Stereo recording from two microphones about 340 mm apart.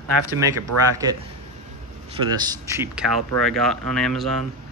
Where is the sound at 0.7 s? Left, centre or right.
Right.